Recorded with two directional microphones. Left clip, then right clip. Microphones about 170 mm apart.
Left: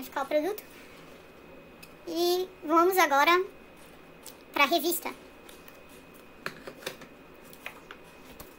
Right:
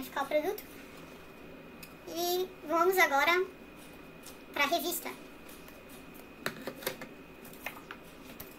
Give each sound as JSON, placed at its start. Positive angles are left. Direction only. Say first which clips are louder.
{"t": 0.1, "sound": "a sound", "louder": "left 3 dB", "side_deg": 45}
{"t": 2.0, "sound": "a child's voice", "louder": "left 5 dB", "side_deg": 40}
{"t": 4.6, "sound": "a child's voice", "louder": "left 5 dB", "side_deg": 40}